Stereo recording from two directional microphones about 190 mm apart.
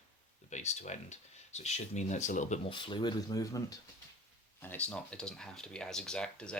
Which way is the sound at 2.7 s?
25° left (ahead or behind).